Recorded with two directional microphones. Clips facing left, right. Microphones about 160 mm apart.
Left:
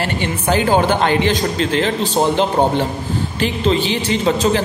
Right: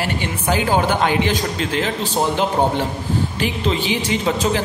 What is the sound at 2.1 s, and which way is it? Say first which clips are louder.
Speech: left 3 dB; 20° left (ahead or behind).